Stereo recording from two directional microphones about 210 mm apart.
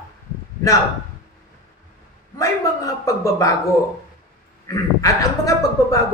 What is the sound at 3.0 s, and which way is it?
Speech, 15° left (ahead or behind).